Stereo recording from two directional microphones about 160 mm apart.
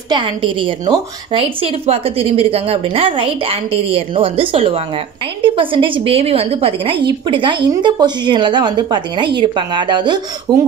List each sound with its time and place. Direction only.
0.1 s a woman's voice: 30° right (ahead or behind)